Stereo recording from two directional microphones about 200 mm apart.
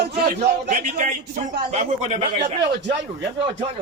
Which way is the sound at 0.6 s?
40° right (ahead or behind).